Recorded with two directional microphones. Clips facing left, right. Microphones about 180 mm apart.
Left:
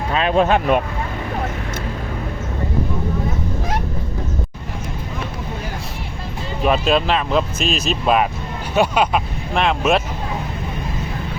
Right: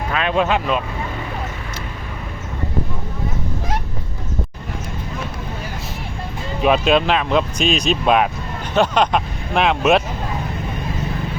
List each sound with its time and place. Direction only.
0.1 s speech: 35° left (ahead or behind)
6.6 s speech: centre (ahead or behind)